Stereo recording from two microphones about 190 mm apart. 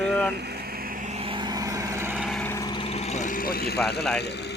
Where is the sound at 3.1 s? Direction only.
45° left (ahead or behind).